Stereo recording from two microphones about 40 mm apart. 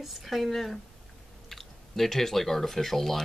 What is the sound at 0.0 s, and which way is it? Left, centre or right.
Speech, centre.